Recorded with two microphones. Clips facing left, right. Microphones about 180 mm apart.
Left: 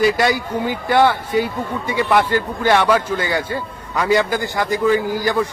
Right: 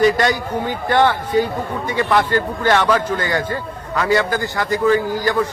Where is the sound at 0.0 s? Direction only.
10° left (ahead or behind).